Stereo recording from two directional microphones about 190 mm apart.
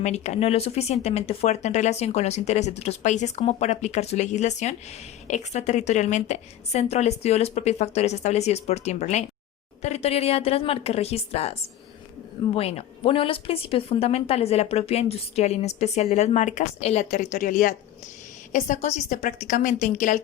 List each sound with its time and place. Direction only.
0.0 s a woman's voice: 35° left (ahead or behind)
12.5 s a woman's voice: 30° left (ahead or behind)